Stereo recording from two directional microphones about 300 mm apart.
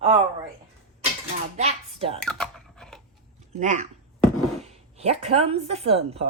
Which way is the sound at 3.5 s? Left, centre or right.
Right.